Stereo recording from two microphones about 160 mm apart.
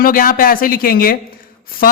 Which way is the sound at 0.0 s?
60° left (ahead or behind).